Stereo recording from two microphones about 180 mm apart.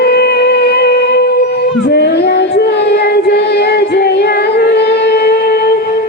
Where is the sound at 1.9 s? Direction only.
65° left (ahead or behind).